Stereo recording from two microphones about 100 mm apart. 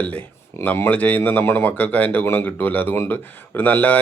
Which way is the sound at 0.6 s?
15° left (ahead or behind).